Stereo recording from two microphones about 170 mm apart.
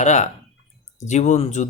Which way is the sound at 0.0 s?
45° left (ahead or behind).